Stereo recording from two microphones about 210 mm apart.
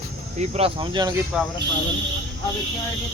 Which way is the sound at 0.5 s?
25° right (ahead or behind).